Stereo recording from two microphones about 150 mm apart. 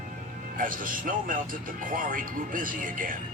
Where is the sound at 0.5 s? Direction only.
65° right (ahead or behind).